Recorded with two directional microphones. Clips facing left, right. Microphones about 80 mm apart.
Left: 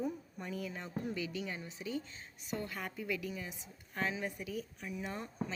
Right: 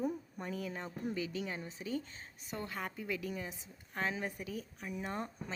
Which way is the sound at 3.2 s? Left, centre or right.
Right.